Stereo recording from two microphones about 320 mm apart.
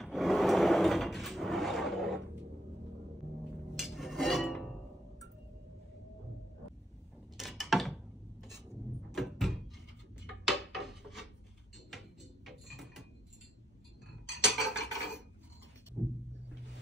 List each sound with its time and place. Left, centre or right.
0.0 s drawer open or close: centre
3.7 s music: centre
7.3 s a sound: centre
9.1 s door: centre
10.2 s a sound: centre
11.9 s music: centre
14.4 s cutlery: centre